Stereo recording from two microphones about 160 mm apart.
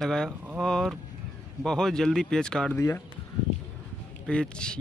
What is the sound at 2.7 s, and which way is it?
Speech, 20° left (ahead or behind).